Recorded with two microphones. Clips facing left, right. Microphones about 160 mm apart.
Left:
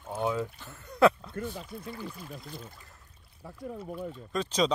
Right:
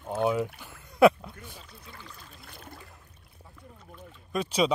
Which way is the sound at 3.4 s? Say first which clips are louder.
Left 13 dB; 75° left (ahead or behind).